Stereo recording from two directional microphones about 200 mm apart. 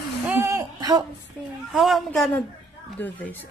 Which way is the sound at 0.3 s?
15° right (ahead or behind).